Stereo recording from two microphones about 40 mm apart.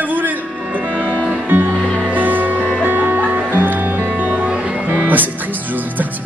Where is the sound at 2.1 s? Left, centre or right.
Right.